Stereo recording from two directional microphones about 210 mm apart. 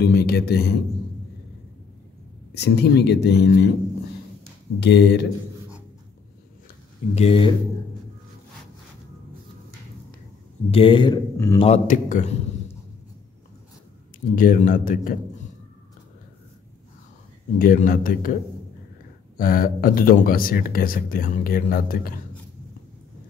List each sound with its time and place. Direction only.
0.0 s speech: 50° left (ahead or behind)
2.5 s speech: 50° left (ahead or behind)
4.7 s speech: 50° left (ahead or behind)
7.2 s speech: 25° left (ahead or behind)
10.7 s a man's voice: 25° left (ahead or behind)
14.3 s a man's voice: 40° left (ahead or behind)
17.6 s speech: 40° left (ahead or behind)
19.3 s speech: 45° left (ahead or behind)